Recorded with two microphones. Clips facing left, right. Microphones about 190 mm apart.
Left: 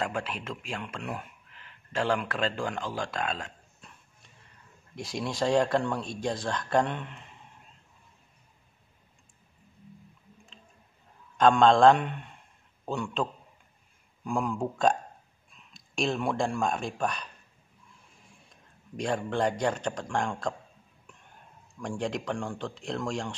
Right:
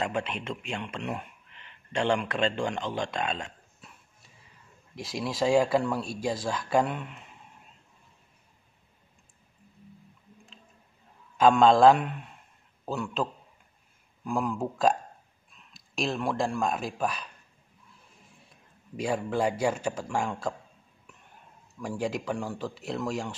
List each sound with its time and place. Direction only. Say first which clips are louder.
0.2 s speech: right 2 dB; 5° left (ahead or behind)
3.2 s a sound: right 1 dB; centre (ahead or behind)
4.9 s speech: even; centre (ahead or behind)
11.3 s speech: right 1 dB; 5° right (ahead or behind)
18.5 s a man's voice: even; 5° right (ahead or behind)
21.7 s speech: right 1 dB; 5° right (ahead or behind)